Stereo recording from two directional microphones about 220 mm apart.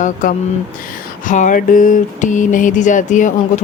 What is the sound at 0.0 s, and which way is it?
Speech, 35° left (ahead or behind).